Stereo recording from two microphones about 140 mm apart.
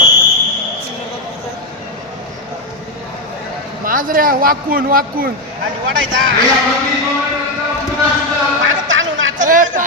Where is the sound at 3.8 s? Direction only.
85° right.